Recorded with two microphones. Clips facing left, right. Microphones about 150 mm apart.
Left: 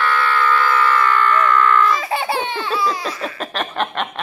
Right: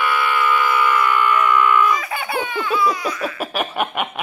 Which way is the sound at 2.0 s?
30° left (ahead or behind).